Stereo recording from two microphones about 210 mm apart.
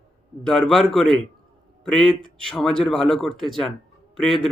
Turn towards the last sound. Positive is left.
turn(degrees=0)  # may be behind; listen again after turning